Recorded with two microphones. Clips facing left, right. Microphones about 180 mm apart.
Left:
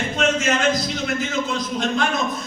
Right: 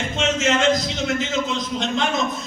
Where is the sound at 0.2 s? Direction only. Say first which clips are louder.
Even; 20° right (ahead or behind).